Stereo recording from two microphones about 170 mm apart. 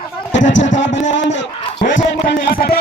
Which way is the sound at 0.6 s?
90° left.